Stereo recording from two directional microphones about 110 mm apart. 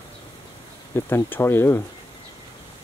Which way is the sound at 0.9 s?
20° left (ahead or behind).